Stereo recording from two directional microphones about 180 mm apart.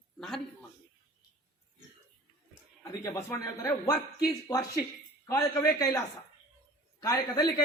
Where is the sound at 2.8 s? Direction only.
20° left (ahead or behind).